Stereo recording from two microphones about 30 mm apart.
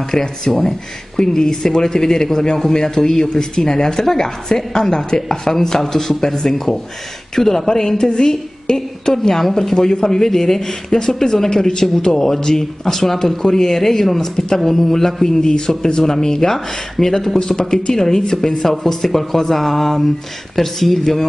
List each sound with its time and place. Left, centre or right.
0.1 s a woman's voice: centre
12.8 s a woman's voice: centre
15.4 s a woman's voice: left; by 17.4 s centre
17.4 s speech: left
17.9 s a woman's voice: centre